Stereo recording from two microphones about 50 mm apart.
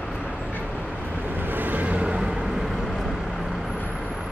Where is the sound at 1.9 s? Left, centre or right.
Right.